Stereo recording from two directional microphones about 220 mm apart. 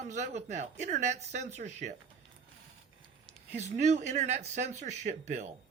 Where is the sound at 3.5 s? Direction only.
30° right (ahead or behind).